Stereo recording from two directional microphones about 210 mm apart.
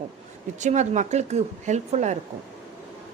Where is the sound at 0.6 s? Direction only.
35° right (ahead or behind).